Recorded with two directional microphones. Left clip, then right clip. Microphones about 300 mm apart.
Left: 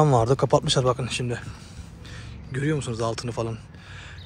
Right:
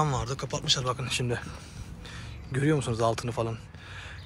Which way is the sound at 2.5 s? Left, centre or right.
Centre.